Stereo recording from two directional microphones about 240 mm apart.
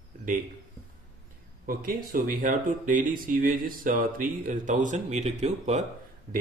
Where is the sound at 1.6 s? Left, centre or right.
Right.